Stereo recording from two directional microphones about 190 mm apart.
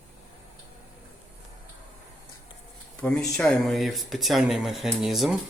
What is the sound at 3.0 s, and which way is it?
Speech, 5° left (ahead or behind).